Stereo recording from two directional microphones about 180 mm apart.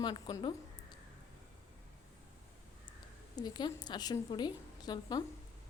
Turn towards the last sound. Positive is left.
turn(degrees=25)  # may be behind; listen again after turning